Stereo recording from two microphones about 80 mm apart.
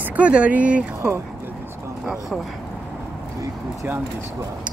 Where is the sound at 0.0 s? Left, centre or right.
Centre.